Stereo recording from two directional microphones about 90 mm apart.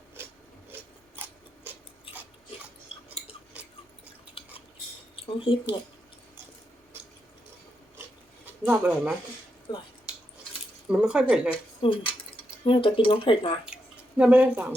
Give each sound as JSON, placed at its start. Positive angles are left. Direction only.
{"t": 0.7, "sound": "a sound", "side_deg": -25}
{"t": 2.1, "sound": "biting", "side_deg": 90}
{"t": 2.9, "sound": "chewing", "side_deg": 90}
{"t": 4.4, "sound": "cutlery", "side_deg": 85}
{"t": 5.1, "sound": "speech", "side_deg": 80}
{"t": 8.6, "sound": "speech", "side_deg": -15}
{"t": 9.7, "sound": "speech", "side_deg": 55}
{"t": 10.1, "sound": "cutlery", "side_deg": -10}
{"t": 10.8, "sound": "speech", "side_deg": -10}
{"t": 11.8, "sound": "speech", "side_deg": 75}
{"t": 14.2, "sound": "speech", "side_deg": -15}